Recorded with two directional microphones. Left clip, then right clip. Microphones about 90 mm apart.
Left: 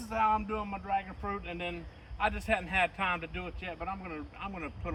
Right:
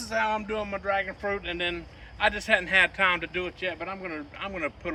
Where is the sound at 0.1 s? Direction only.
50° left (ahead or behind).